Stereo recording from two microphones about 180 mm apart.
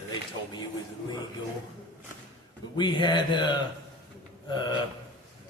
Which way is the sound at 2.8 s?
25° left (ahead or behind).